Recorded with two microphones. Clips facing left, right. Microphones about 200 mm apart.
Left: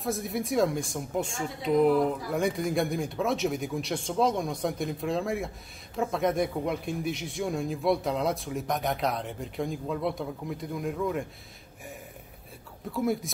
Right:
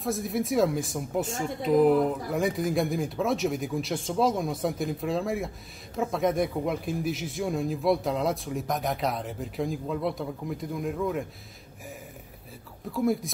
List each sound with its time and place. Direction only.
0.0 s a woman's voice: centre (ahead or behind)
12.9 s a woman's voice: centre (ahead or behind)